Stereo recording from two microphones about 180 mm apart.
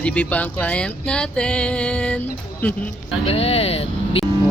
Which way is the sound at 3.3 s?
35° left (ahead or behind).